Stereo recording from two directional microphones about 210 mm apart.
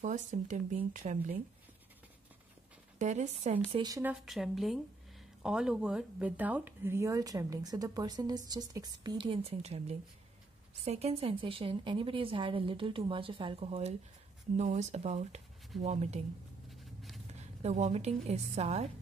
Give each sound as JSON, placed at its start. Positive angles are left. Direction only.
{"t": 0.0, "sound": "speech", "side_deg": -35}
{"t": 3.0, "sound": "speech", "side_deg": -35}
{"t": 3.6, "sound": "a woman's voice", "side_deg": -20}
{"t": 17.3, "sound": "a woman's voice", "side_deg": -30}